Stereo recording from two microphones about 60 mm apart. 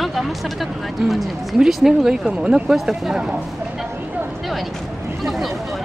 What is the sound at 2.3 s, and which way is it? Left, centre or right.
Speech, centre.